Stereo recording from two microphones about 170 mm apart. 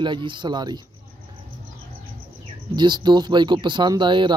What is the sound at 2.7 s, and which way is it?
Speech, 25° right (ahead or behind).